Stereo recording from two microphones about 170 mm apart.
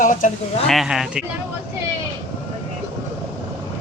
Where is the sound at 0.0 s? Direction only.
50° left (ahead or behind).